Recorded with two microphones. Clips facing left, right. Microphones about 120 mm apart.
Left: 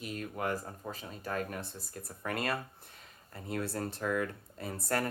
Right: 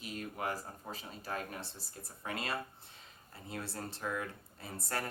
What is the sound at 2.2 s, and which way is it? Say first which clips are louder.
Speech: left 5 dB; 55° left (ahead or behind).